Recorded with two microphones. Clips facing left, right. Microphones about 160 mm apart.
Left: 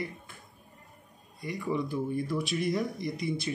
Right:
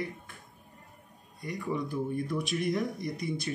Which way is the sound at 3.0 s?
45° right (ahead or behind).